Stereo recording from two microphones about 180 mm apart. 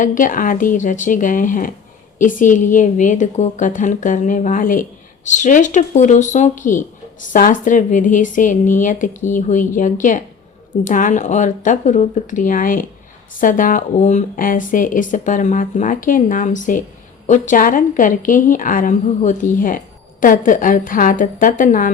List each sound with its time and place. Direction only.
0.0 s a woman's voice: 45° left (ahead or behind)